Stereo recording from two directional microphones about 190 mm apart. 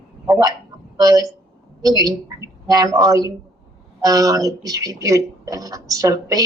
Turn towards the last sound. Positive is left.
turn(degrees=-20)  # may be behind; listen again after turning